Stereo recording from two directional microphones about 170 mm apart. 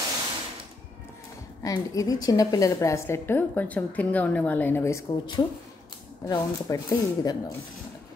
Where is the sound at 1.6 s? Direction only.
20° left (ahead or behind).